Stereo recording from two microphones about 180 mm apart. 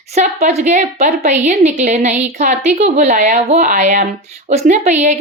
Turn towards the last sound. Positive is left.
turn(degrees=-40)  # may be behind; listen again after turning